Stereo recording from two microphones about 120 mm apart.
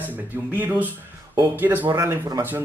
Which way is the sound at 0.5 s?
15° right (ahead or behind).